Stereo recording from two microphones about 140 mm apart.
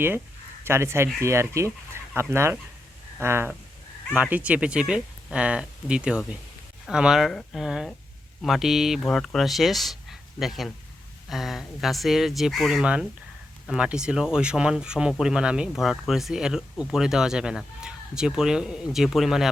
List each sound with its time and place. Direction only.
0.6 s speech: 20° right (ahead or behind); by 19.5 s centre (ahead or behind)